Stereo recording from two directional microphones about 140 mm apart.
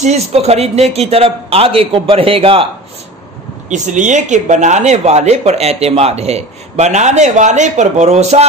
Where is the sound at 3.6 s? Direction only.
60° right (ahead or behind).